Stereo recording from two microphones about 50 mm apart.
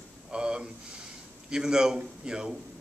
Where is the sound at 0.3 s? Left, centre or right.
Centre.